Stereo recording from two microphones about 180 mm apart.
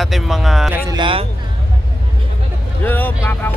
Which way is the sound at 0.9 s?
25° right (ahead or behind).